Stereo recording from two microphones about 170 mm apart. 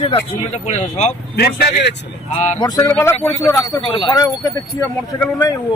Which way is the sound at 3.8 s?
30° left (ahead or behind).